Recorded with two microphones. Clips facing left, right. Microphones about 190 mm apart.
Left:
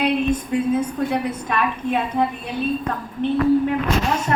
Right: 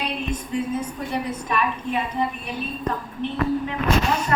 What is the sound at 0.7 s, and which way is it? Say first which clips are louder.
A woman's voice: left 6 dB; 60° left (ahead or behind).